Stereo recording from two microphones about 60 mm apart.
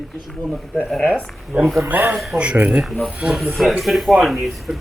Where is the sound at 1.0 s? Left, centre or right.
Right.